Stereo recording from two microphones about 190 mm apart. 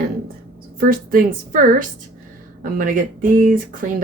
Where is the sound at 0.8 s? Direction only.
45° right (ahead or behind).